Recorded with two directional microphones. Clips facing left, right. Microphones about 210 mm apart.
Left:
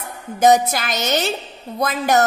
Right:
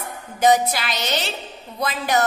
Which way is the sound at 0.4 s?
45° left (ahead or behind).